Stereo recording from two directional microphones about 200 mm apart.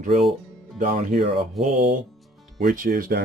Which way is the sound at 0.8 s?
40° right (ahead or behind).